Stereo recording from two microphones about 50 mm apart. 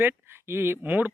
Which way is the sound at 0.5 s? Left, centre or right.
Right.